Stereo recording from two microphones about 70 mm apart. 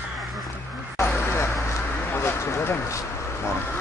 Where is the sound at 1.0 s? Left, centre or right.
Left.